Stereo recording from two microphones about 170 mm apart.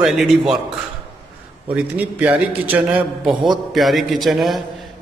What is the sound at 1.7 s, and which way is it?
A man's voice, 10° right (ahead or behind).